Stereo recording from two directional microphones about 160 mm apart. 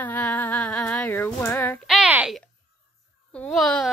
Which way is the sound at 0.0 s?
10° left (ahead or behind).